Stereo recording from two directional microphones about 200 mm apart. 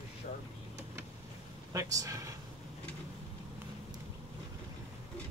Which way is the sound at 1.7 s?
15° right (ahead or behind).